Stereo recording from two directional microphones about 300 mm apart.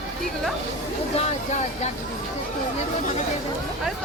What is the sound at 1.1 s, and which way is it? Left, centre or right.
Speech, left.